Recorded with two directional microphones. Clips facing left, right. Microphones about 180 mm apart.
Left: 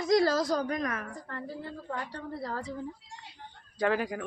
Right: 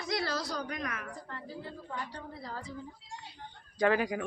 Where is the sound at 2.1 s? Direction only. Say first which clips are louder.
Left 6 dB; 65° left (ahead or behind).